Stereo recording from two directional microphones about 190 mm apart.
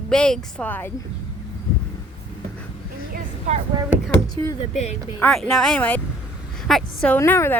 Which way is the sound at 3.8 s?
5° right (ahead or behind).